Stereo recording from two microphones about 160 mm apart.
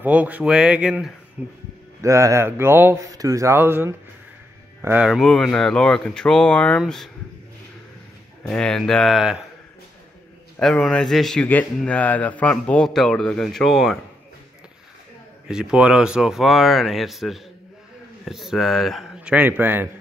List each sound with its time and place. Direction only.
0.0 s a man's voice: 10° right (ahead or behind)
8.5 s a man's voice: 5° left (ahead or behind)
10.6 s a man's voice: 5° left (ahead or behind)
15.4 s a man's voice: 5° right (ahead or behind)